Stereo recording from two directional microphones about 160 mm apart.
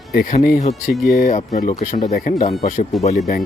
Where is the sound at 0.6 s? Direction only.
45° left (ahead or behind).